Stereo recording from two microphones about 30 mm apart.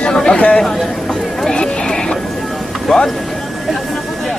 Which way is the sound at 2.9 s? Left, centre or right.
Left.